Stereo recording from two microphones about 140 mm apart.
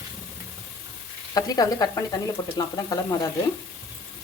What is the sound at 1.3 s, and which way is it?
Speech, 25° left (ahead or behind).